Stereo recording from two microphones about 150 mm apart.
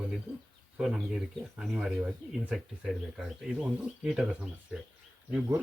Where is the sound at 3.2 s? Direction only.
5° right (ahead or behind).